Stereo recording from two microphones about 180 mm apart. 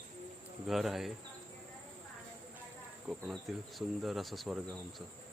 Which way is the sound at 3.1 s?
5° right (ahead or behind).